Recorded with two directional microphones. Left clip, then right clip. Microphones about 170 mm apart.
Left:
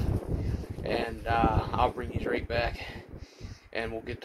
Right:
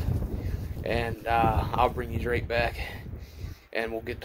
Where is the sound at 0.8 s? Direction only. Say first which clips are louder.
Right 2 dB; 15° right (ahead or behind).